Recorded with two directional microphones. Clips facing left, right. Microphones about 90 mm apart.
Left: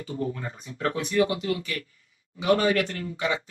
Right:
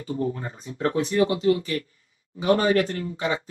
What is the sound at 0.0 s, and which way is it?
Speech, 35° right (ahead or behind).